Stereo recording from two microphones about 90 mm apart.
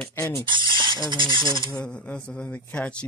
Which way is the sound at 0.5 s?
65° right (ahead or behind).